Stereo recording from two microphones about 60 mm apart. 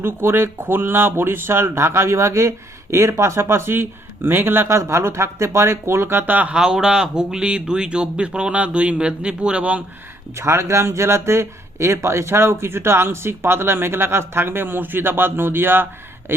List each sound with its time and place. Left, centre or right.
0.0 s speech: right
4.7 s speech: right
6.5 s speech: centre
10.3 s speech: right